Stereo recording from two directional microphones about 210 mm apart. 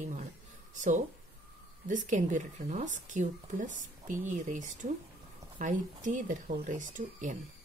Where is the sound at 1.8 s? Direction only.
35° right (ahead or behind).